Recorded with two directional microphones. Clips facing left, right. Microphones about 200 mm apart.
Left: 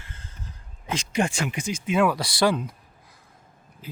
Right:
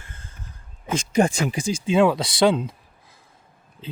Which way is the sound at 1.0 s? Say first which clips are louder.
Right 6 dB; 40° right (ahead or behind).